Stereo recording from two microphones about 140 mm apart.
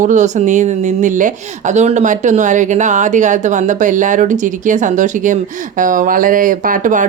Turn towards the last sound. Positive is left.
turn(degrees=-70)  # may be behind; listen again after turning